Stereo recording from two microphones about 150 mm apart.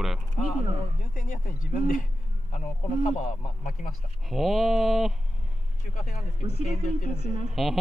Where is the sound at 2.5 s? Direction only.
55° left (ahead or behind).